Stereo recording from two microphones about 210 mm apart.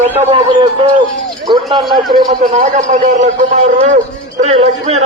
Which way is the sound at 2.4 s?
35° right (ahead or behind).